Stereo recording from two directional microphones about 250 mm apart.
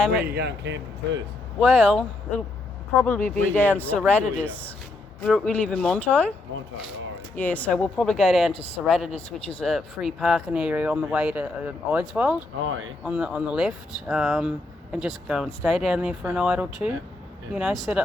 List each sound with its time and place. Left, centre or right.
0.3 s speech: right
1.5 s speech: centre
7.3 s speech: centre
12.6 s speech: right
13.1 s speech: centre